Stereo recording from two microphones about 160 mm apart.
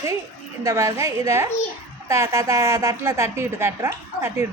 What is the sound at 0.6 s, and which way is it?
A woman's voice, 20° right (ahead or behind).